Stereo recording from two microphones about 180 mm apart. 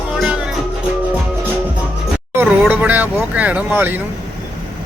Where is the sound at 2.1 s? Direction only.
10° right (ahead or behind).